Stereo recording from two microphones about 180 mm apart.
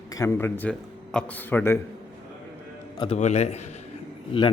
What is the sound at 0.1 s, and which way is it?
Speech, 20° left (ahead or behind).